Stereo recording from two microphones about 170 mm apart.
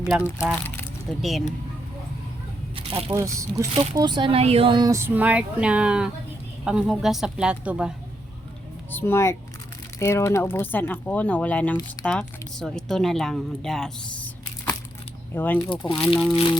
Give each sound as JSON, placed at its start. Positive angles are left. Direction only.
{"t": 0.2, "sound": "speech", "side_deg": 15}
{"t": 1.2, "sound": "speech", "side_deg": 0}
{"t": 2.7, "sound": "crunch", "side_deg": -35}
{"t": 3.1, "sound": "speech", "side_deg": -15}
{"t": 8.9, "sound": "speech", "side_deg": 10}
{"t": 15.7, "sound": "speech", "side_deg": 30}